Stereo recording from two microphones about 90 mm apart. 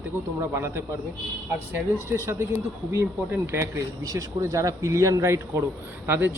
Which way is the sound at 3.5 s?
35° right (ahead or behind).